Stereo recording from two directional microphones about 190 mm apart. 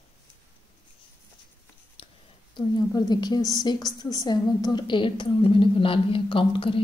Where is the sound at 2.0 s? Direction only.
30° left (ahead or behind).